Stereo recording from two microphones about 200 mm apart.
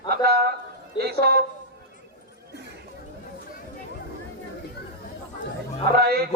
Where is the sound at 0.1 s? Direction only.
50° right (ahead or behind).